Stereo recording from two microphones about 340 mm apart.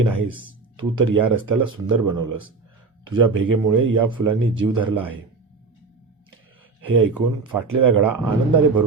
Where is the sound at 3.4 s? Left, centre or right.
Right.